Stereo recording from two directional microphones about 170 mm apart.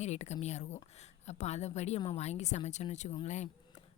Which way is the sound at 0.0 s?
40° left (ahead or behind).